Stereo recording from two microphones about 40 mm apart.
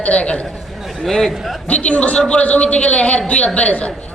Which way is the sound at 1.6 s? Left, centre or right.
Left.